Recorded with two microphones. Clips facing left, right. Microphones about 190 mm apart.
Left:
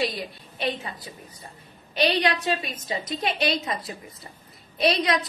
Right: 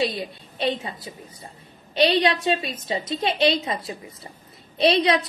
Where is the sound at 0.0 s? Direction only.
25° right (ahead or behind).